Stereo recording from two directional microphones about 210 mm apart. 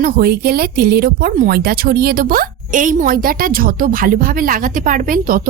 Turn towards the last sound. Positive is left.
turn(degrees=-40)  # may be behind; listen again after turning